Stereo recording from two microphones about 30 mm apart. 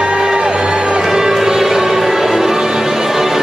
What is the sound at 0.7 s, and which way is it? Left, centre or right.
Music, right.